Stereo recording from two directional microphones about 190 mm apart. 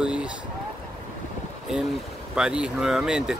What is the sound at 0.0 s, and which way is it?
Boat, 5° right (ahead or behind).